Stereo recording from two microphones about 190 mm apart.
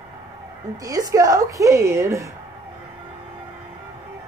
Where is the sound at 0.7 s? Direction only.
20° right (ahead or behind).